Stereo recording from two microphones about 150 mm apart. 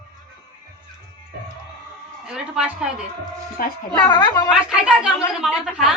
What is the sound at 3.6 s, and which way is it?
Speech, 75° left (ahead or behind).